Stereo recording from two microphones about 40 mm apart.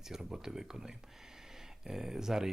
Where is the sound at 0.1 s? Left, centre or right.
Centre.